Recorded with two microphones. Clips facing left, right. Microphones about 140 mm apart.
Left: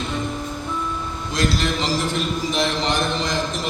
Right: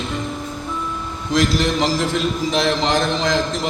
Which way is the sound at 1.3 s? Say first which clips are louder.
Right 5 dB; 90° right.